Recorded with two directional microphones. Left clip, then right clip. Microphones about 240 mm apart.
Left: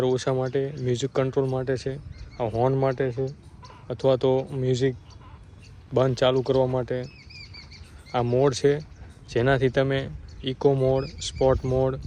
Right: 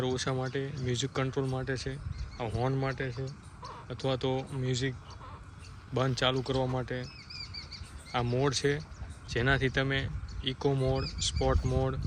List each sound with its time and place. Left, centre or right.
0.0 s speech: centre
3.0 s speech: centre
7.4 s bird flight: right
8.1 s speech: centre